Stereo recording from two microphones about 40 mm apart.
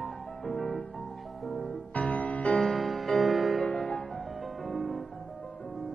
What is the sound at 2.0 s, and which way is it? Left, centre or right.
Music, left.